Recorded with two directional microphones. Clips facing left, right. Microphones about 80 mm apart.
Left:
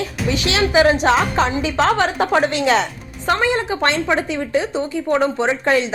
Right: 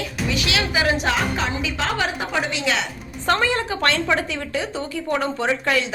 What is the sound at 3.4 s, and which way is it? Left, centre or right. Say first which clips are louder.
Speech: left 3 dB; left.